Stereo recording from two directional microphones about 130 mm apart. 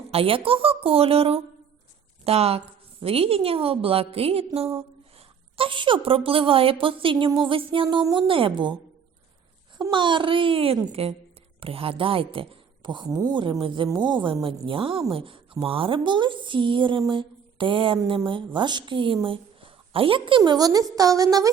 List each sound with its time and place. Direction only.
0.1 s a woman's voice: 45° right (ahead or behind)
9.7 s a woman's voice: 35° right (ahead or behind)
13.3 s a woman's voice: 40° right (ahead or behind)
17.1 s mantra: 40° right (ahead or behind)
18.3 s a woman's voice: 40° right (ahead or behind)